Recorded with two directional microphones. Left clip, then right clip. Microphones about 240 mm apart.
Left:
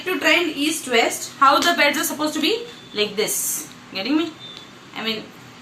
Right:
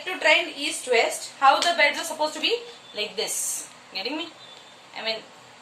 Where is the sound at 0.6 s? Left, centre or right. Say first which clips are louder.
Left 3 dB; centre.